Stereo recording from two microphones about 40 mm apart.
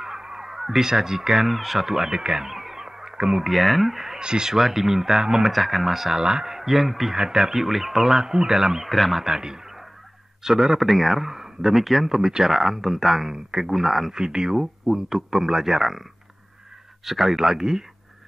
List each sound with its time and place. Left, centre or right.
0.0 s a sound: centre
0.5 s speech: centre
2.4 s a sound: centre
3.4 s speech: centre
4.2 s speech: centre
5.5 s speech: centre
7.2 s speech: centre
8.9 s speech: centre
9.2 s speech: centre
12.2 s speech: centre
14.1 s speech: centre
17.0 s speech: centre